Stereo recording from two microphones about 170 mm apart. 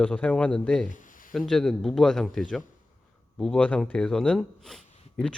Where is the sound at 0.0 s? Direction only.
5° left (ahead or behind).